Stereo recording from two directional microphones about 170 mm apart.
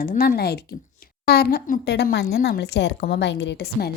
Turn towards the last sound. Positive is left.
turn(degrees=70)  # may be behind; listen again after turning